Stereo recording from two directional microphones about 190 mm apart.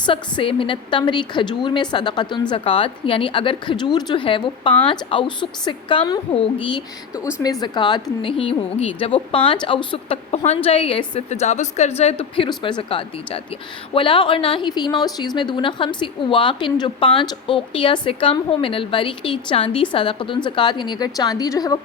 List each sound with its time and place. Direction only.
0.0 s a woman's voice: 25° left (ahead or behind)